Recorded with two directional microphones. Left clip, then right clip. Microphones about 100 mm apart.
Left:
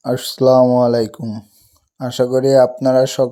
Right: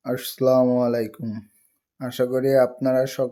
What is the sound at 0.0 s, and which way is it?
Speech, 45° left (ahead or behind).